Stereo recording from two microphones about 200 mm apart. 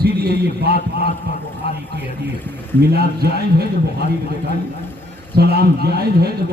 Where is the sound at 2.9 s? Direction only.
55° right (ahead or behind).